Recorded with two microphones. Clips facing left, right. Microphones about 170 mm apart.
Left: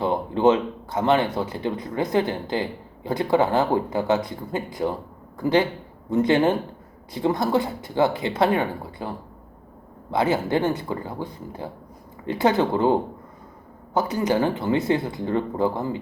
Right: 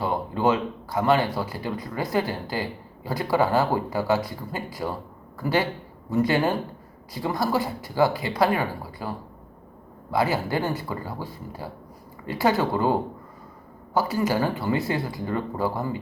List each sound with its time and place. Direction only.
0.0 s speech: 20° left (ahead or behind)